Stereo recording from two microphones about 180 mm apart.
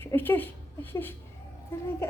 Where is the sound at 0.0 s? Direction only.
10° left (ahead or behind).